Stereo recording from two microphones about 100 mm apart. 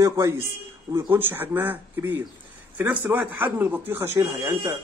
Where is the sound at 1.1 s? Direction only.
20° right (ahead or behind).